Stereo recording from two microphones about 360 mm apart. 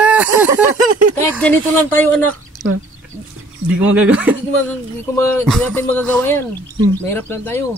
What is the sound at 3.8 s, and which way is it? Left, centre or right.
Speech, centre.